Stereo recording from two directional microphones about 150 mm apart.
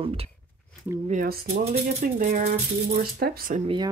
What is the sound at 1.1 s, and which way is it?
Speech, 60° right (ahead or behind).